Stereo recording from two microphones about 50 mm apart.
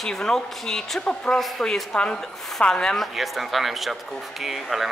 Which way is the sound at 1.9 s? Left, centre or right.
Centre.